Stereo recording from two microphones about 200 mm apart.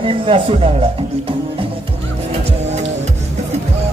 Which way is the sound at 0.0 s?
25° right (ahead or behind).